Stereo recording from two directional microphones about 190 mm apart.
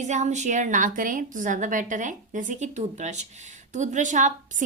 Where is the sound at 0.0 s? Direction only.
40° right (ahead or behind).